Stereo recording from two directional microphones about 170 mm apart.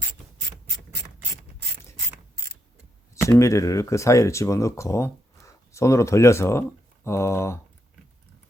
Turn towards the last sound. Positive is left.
turn(degrees=15)  # may be behind; listen again after turning